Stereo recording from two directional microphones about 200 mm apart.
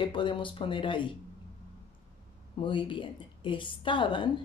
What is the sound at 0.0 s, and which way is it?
Speech, 25° left (ahead or behind).